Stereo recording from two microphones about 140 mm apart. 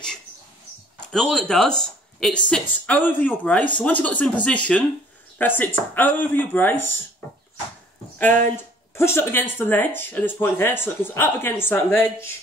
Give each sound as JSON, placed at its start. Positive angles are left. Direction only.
{"t": 1.1, "sound": "speech", "side_deg": 5}
{"t": 8.2, "sound": "speech", "side_deg": 15}